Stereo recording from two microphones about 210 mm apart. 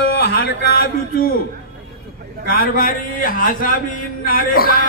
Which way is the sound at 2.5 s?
45° left (ahead or behind).